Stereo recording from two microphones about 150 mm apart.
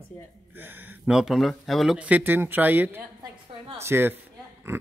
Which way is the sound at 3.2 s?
35° right (ahead or behind).